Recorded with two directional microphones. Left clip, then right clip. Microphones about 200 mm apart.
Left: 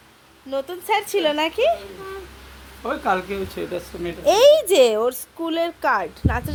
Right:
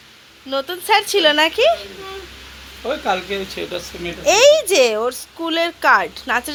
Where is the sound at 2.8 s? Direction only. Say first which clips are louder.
Right 2 dB; 50° left (ahead or behind).